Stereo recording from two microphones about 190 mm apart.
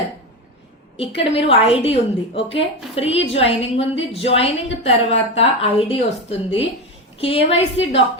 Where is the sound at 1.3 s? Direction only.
30° left (ahead or behind).